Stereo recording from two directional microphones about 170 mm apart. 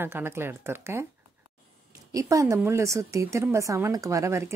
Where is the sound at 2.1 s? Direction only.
20° right (ahead or behind).